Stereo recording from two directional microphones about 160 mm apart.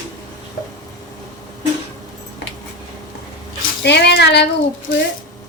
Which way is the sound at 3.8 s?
90° left.